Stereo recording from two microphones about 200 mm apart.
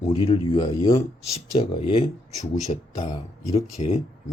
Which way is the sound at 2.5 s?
35° left (ahead or behind).